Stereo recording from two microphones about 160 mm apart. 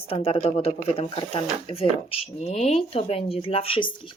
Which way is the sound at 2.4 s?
40° left (ahead or behind).